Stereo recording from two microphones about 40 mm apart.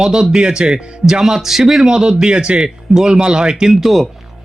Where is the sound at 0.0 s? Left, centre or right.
Centre.